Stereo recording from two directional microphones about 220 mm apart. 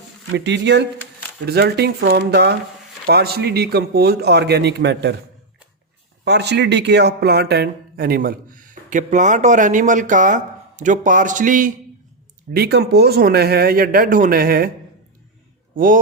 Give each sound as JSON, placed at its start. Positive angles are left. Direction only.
{"t": 0.3, "sound": "speech", "side_deg": -50}
{"t": 6.2, "sound": "speech", "side_deg": -50}
{"t": 12.5, "sound": "speech", "side_deg": -45}
{"t": 15.7, "sound": "speech", "side_deg": -40}